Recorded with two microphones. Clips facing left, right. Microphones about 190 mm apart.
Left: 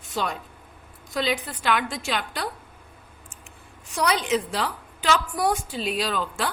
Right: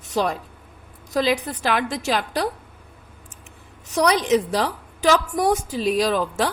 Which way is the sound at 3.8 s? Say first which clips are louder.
Right 5 dB; 40° right (ahead or behind).